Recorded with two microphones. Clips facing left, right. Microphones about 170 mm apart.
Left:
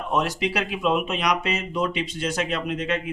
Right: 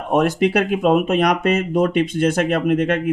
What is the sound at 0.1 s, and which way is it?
Speech, 50° right (ahead or behind).